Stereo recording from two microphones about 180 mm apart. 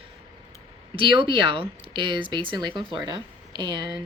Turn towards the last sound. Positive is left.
turn(degrees=-25)  # may be behind; listen again after turning